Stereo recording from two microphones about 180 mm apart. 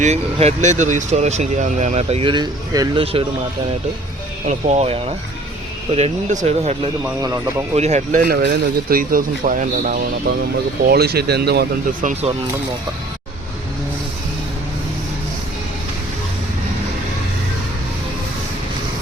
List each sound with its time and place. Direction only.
0.0 s speech: 35° right (ahead or behind); by 3.0 s 20° right (ahead or behind)
3.0 s speech: 30° right (ahead or behind)
4.4 s speech: 35° right (ahead or behind)
7.0 s speech: 15° right (ahead or behind)
7.8 s speech: 40° right (ahead or behind)
8.2 s a man's voice: 60° right (ahead or behind); by 10.0 s 45° right (ahead or behind)
10.8 s speech: 60° right (ahead or behind)